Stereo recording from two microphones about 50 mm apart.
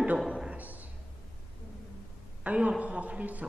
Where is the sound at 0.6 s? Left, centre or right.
Right.